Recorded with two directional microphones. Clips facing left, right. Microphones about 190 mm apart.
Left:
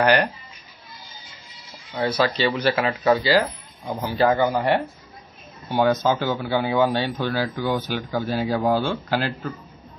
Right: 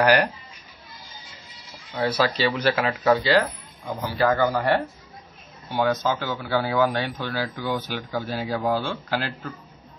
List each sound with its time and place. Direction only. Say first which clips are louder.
0.0 s speech: even; 5° right (ahead or behind)
1.9 s speech: left 1 dB; centre (ahead or behind)
3.8 s speech: left 2 dB; 15° left (ahead or behind)